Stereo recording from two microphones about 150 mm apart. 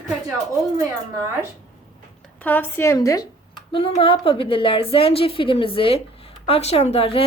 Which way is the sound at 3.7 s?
40° left (ahead or behind).